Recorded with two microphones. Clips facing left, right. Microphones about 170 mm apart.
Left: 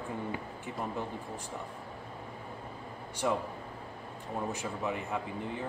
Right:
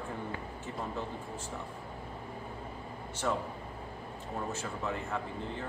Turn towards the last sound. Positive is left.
turn(degrees=15)  # may be behind; listen again after turning